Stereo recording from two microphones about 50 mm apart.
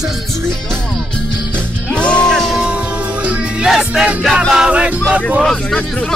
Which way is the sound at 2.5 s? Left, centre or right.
Centre.